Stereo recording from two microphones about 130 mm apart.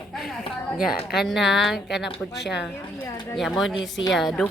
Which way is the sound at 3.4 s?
Centre (ahead or behind).